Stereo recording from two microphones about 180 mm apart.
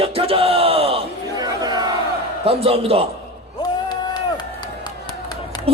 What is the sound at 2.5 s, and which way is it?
Speech, 35° right (ahead or behind).